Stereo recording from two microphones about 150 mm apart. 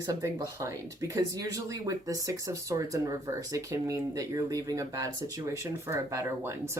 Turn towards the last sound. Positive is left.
turn(degrees=-15)  # may be behind; listen again after turning